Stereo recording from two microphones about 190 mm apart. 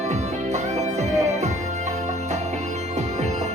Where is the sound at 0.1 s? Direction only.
35° right (ahead or behind).